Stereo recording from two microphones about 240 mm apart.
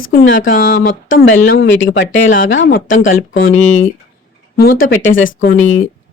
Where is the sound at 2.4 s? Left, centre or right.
Left.